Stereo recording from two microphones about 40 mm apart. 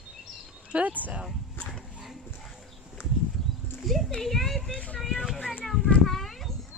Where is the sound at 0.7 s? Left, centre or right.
Right.